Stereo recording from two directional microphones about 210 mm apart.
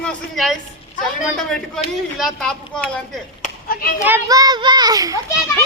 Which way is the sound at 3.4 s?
45° left (ahead or behind).